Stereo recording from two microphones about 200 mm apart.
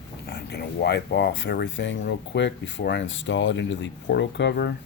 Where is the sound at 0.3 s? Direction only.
55° left (ahead or behind).